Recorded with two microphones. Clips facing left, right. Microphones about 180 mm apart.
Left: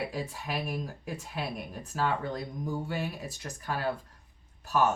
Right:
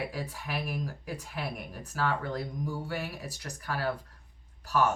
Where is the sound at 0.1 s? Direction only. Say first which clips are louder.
Left 2 dB; 20° left (ahead or behind).